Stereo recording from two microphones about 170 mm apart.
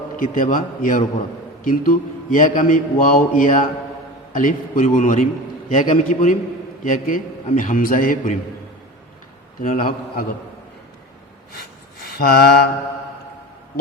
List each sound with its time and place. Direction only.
0.2 s speech: 50° left (ahead or behind)
9.6 s a man's voice: 55° left (ahead or behind)
12.0 s a sound: 65° left (ahead or behind)